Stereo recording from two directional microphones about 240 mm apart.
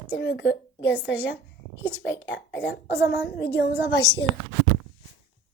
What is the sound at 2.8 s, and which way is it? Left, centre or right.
A woman's voice, centre.